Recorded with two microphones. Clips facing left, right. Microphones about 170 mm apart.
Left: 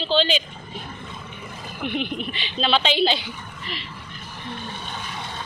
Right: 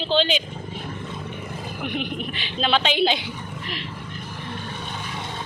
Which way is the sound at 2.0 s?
10° right (ahead or behind).